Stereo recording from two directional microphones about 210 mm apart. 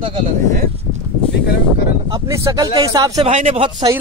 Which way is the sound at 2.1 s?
15° right (ahead or behind).